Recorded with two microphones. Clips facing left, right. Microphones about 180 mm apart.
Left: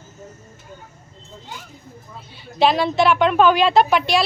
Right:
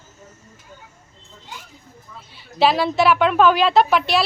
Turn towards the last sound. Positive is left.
turn(degrees=0)  # may be behind; listen again after turning